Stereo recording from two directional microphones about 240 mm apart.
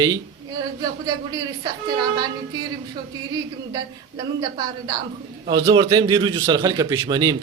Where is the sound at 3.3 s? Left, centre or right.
Centre.